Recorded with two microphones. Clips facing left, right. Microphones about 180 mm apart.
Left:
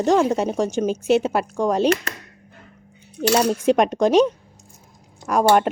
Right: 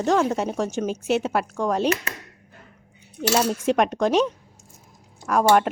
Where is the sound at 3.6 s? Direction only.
Centre (ahead or behind).